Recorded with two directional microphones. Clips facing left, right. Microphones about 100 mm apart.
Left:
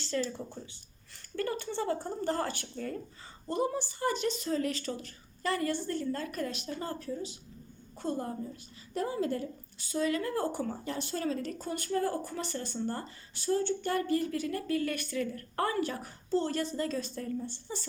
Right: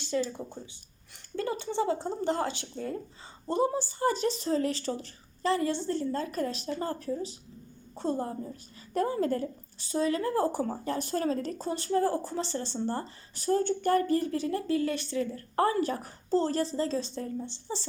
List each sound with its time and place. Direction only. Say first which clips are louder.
0.0 s a woman's voice: right 3 dB; 15° right (ahead or behind)
8.9 s a woman's voice: right 4 dB; 50° right (ahead or behind); by 17.8 s 25° right (ahead or behind)